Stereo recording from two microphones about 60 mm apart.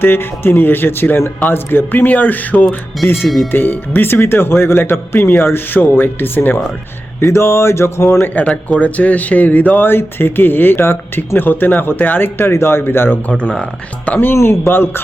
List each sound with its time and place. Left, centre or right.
0.0 s speech: left
3.2 s speech: centre
3.5 s speech: left
7.2 s a sound: left
8.4 s speech: left
13.2 s speech: left
14.3 s speech: left